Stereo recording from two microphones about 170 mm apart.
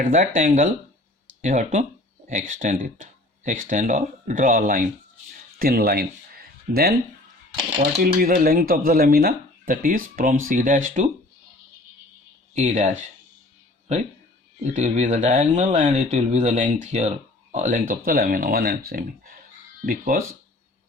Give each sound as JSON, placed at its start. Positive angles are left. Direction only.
{"t": 0.0, "sound": "speech", "side_deg": -50}
{"t": 12.5, "sound": "speech", "side_deg": -45}